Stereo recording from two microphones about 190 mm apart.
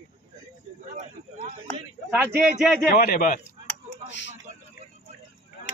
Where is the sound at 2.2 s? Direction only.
5° right (ahead or behind).